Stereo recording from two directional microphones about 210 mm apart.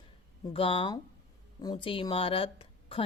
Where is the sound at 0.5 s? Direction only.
25° left (ahead or behind).